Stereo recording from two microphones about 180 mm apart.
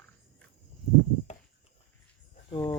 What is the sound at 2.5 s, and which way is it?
Speech, 20° left (ahead or behind).